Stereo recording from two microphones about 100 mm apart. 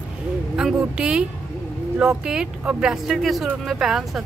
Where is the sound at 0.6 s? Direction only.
5° right (ahead or behind).